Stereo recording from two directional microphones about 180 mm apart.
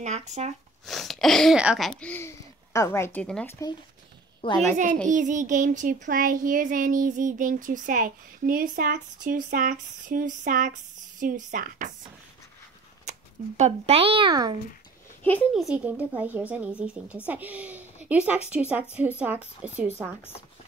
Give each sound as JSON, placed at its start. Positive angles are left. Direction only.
{"t": 0.0, "sound": "a child's voice", "side_deg": -40}
{"t": 0.8, "sound": "speech", "side_deg": 0}
{"t": 4.4, "sound": "a woman's voice", "side_deg": 30}
{"t": 5.0, "sound": "a child's voice", "side_deg": -45}
{"t": 13.1, "sound": "a sound", "side_deg": -40}
{"t": 13.6, "sound": "a child's voice", "side_deg": -35}
{"t": 15.5, "sound": "a woman's voice", "side_deg": -5}
{"t": 20.2, "sound": "speech", "side_deg": 10}